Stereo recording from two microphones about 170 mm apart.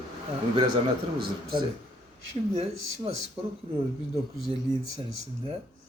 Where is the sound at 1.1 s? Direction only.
30° right (ahead or behind).